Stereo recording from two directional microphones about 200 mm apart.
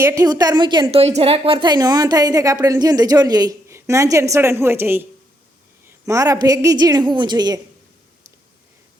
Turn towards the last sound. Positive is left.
turn(degrees=-20)  # may be behind; listen again after turning